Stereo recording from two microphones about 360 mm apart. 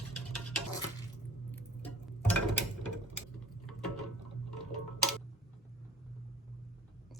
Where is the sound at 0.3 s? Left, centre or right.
Centre.